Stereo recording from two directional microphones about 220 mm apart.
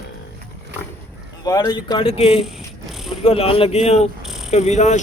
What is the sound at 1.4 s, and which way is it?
Speech, 15° left (ahead or behind).